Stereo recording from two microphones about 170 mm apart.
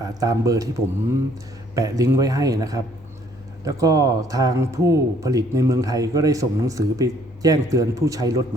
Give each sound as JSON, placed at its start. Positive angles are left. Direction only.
{"t": 0.0, "sound": "speech", "side_deg": -20}
{"t": 1.7, "sound": "speech", "side_deg": -20}